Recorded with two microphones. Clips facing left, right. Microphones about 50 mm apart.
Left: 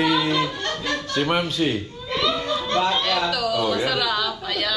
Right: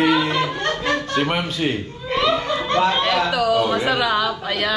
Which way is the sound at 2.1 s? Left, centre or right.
Right.